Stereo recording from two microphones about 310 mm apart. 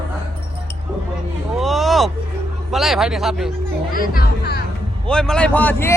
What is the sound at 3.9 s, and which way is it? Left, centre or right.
Speech, left.